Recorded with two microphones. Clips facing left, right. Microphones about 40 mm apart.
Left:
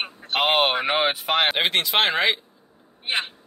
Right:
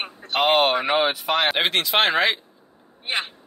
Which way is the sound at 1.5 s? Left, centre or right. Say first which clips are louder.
Right 1 dB; centre.